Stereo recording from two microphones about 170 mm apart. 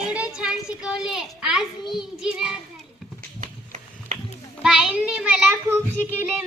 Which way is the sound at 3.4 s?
45° right (ahead or behind).